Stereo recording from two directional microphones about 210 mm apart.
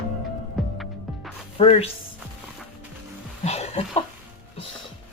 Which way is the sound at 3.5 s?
30° left (ahead or behind).